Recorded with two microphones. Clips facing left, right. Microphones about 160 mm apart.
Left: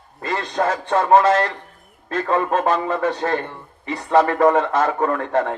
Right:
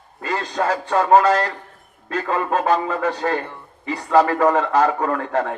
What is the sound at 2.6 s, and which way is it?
A man's voice, 35° right (ahead or behind).